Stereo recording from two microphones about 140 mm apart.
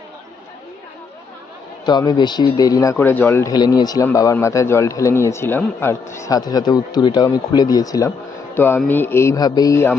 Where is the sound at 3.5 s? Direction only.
30° left (ahead or behind).